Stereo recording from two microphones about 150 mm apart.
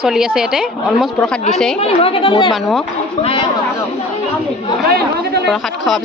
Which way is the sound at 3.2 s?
45° left (ahead or behind).